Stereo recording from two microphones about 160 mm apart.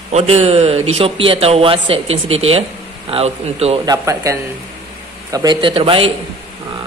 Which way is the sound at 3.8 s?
20° right (ahead or behind).